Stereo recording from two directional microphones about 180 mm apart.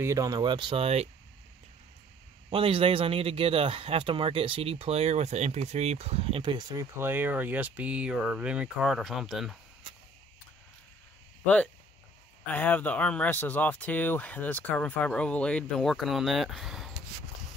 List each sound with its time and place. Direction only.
0.0 s speech: 20° right (ahead or behind)
2.5 s speech: 30° right (ahead or behind); by 9.6 s centre (ahead or behind)
11.4 s speech: 5° left (ahead or behind)